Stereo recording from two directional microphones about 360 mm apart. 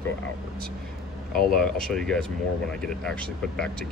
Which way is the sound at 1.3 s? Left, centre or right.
Left.